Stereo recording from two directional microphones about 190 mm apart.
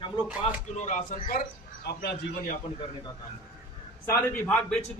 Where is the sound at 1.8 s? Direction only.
60° left (ahead or behind).